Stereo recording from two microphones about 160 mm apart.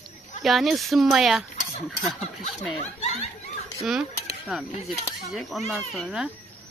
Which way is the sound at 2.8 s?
45° left (ahead or behind).